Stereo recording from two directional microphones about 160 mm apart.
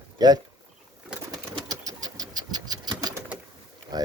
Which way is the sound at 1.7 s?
25° right (ahead or behind).